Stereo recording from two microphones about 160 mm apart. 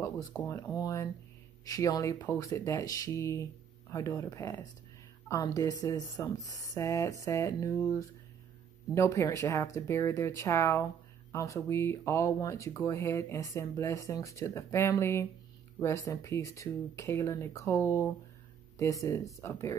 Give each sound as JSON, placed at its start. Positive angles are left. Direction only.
{"t": 0.0, "sound": "speech", "side_deg": 15}